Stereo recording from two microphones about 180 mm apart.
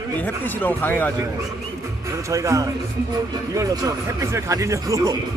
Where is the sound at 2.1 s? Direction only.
15° right (ahead or behind).